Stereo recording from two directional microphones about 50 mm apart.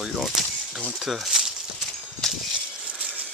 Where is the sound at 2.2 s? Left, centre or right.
Centre.